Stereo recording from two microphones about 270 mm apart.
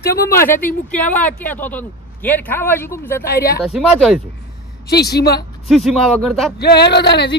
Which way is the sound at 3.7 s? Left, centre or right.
Centre.